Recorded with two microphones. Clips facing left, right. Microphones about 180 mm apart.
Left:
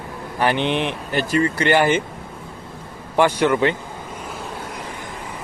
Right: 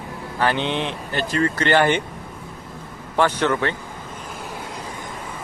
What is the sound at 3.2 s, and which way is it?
Speech, 10° left (ahead or behind).